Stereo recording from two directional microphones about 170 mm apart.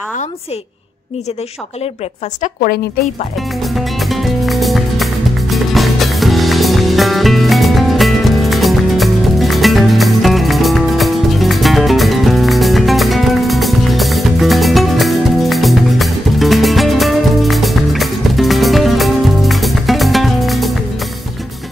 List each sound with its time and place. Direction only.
2.4 s speech: 55° left (ahead or behind)
3.6 s music: centre (ahead or behind)